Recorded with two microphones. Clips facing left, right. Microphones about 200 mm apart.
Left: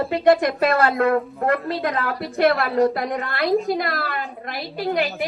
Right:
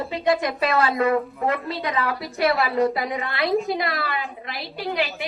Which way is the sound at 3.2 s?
50° left (ahead or behind).